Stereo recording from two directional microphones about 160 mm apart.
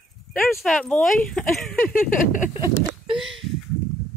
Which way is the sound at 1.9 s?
55° left (ahead or behind).